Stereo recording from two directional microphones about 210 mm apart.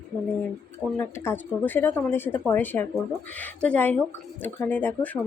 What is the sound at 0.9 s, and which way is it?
Speech, 10° left (ahead or behind).